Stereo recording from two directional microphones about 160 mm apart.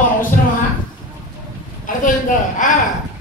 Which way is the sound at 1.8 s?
55° left (ahead or behind).